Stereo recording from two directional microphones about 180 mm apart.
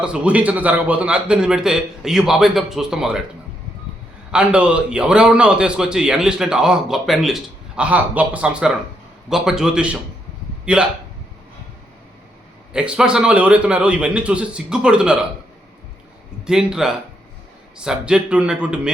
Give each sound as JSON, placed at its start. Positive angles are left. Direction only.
{"t": 0.0, "sound": "a man's voice", "side_deg": -5}
{"t": 4.3, "sound": "a man's voice", "side_deg": -5}
{"t": 12.7, "sound": "a man's voice", "side_deg": -5}
{"t": 16.5, "sound": "a man's voice", "side_deg": -5}